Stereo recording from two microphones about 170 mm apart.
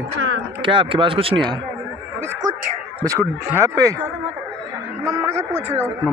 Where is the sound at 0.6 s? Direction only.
30° right (ahead or behind).